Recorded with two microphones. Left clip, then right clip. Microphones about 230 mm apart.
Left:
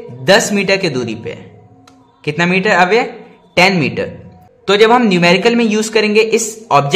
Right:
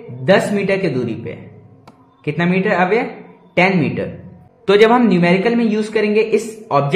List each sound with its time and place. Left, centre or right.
0.2 s a man's voice: left